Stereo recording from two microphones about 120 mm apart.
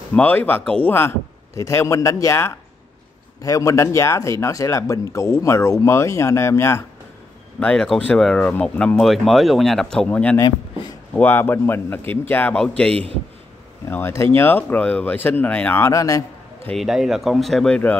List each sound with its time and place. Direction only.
0.1 s speech: 15° left (ahead or behind)
0.9 s speech: 25° left (ahead or behind)
7.6 s speech: 5° left (ahead or behind)
12.9 s a man's voice: 55° right (ahead or behind)
13.8 s speech: 20° left (ahead or behind)
16.7 s speech: 5° right (ahead or behind)